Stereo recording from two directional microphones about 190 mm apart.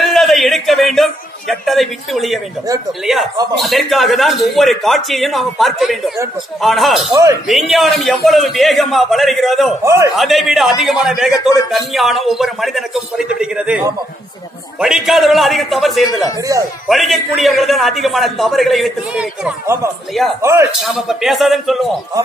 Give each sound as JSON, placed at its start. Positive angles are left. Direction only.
{"t": 0.0, "sound": "a man's voice", "side_deg": 0}
{"t": 3.5, "sound": "a man's voice", "side_deg": 0}
{"t": 7.1, "sound": "a man's voice", "side_deg": -15}
{"t": 7.4, "sound": "a man's voice", "side_deg": 0}
{"t": 20.4, "sound": "a man's voice", "side_deg": -15}
{"t": 20.7, "sound": "a man's voice", "side_deg": 0}